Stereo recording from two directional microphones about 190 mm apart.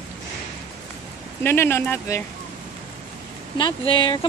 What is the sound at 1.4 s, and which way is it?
Speech, 10° left (ahead or behind).